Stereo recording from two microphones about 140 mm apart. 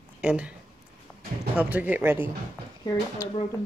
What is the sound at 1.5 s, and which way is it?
Speech, 10° right (ahead or behind).